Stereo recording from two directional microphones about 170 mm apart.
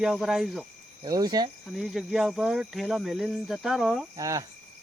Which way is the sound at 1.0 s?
20° right (ahead or behind).